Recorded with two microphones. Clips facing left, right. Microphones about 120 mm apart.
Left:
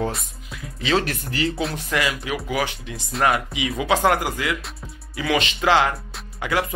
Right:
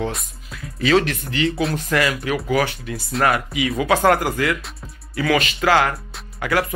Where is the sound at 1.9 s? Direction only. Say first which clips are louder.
Right 3 dB; 15° left (ahead or behind).